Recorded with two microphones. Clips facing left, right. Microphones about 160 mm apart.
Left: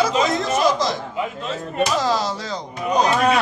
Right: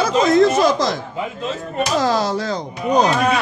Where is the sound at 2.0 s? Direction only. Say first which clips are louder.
Right 4 dB; 55° right (ahead or behind).